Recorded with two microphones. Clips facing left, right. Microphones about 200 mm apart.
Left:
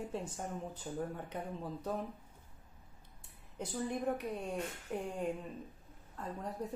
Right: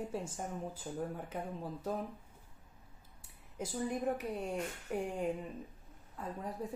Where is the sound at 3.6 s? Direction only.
5° right (ahead or behind).